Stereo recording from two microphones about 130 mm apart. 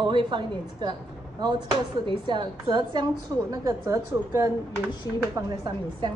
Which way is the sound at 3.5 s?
25° right (ahead or behind).